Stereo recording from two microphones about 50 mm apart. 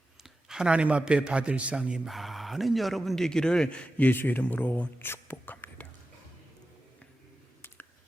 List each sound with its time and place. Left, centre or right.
0.2 s a man's voice: centre
2.0 s speech: centre
3.2 s a man's voice: centre; by 5.7 s left